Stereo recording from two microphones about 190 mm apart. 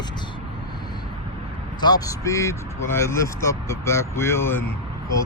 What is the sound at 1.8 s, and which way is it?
Speech, 20° left (ahead or behind).